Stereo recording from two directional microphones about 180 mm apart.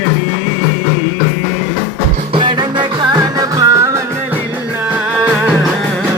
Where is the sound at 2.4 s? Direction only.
25° right (ahead or behind).